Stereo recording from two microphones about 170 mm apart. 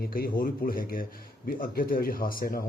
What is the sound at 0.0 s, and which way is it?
Speech, 55° left (ahead or behind).